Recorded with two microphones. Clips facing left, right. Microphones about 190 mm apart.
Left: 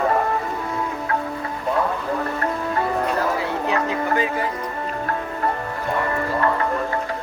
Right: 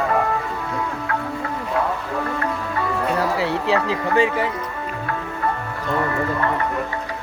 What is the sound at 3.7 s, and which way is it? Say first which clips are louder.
Speech: right 1 dB; 30° right (ahead or behind).